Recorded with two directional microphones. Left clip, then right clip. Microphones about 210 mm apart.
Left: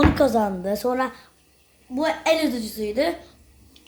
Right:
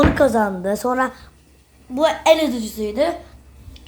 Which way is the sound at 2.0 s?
15° right (ahead or behind).